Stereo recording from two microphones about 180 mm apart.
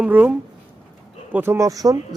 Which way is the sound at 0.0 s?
10° right (ahead or behind).